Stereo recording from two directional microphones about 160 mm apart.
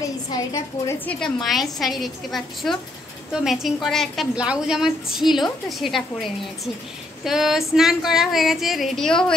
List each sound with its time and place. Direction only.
0.3 s a woman's voice: 20° left (ahead or behind)
1.0 s a woman's voice: centre (ahead or behind)